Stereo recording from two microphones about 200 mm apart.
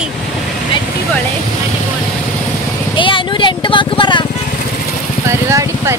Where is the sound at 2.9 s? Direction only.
25° left (ahead or behind).